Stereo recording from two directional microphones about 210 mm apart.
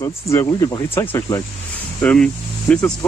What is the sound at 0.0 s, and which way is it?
Speech, 15° left (ahead or behind).